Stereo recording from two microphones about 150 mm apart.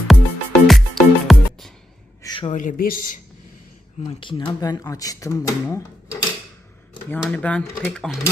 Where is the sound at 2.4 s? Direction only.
55° left (ahead or behind).